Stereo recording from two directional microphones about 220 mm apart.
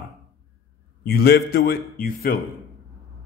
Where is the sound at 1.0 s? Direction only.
45° left (ahead or behind).